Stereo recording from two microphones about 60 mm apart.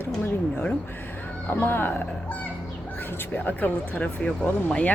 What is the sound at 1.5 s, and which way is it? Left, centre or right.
Speech, left.